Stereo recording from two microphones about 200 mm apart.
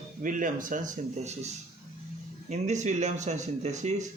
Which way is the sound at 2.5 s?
35° right (ahead or behind).